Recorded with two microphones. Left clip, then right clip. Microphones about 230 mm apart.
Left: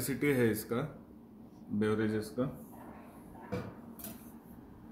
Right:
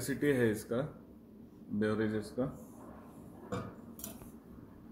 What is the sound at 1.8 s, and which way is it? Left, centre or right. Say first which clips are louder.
Speech: left 1 dB; centre.